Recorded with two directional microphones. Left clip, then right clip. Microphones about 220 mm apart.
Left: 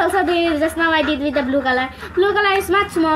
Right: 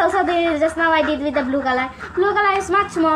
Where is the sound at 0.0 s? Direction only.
30° left (ahead or behind).